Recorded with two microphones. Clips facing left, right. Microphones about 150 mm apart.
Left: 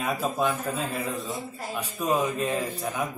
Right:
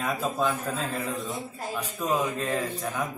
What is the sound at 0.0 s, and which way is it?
Speech, 15° left (ahead or behind).